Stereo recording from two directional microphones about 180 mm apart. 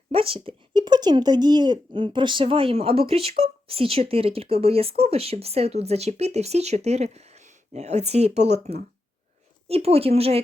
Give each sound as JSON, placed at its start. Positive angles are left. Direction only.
{"t": 0.1, "sound": "speech", "side_deg": -30}